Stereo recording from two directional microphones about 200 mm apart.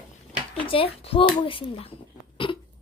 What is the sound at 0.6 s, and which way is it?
Speech, 30° left (ahead or behind).